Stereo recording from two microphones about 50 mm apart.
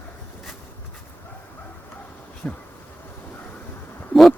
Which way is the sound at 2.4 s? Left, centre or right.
Left.